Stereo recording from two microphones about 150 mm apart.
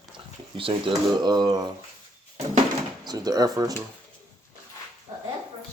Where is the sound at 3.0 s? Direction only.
25° right (ahead or behind).